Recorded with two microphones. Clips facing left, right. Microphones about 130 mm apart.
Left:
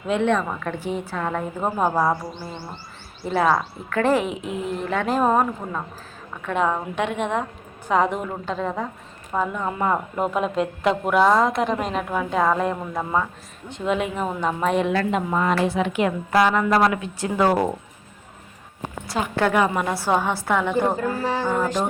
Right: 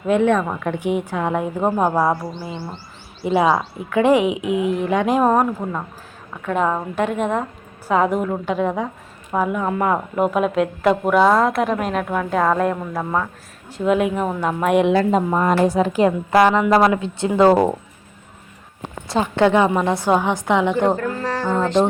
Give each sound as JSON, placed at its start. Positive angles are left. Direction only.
{"t": 0.1, "sound": "a woman's voice", "side_deg": -10}
{"t": 4.4, "sound": "speech", "side_deg": -65}
{"t": 4.9, "sound": "a woman's voice", "side_deg": -15}
{"t": 15.1, "sound": "a woman's voice", "side_deg": -40}
{"t": 19.0, "sound": "a woman's voice", "side_deg": -25}
{"t": 20.9, "sound": "music", "side_deg": 10}